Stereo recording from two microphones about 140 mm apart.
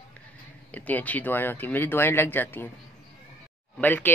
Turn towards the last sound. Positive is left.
turn(degrees=15)  # may be behind; listen again after turning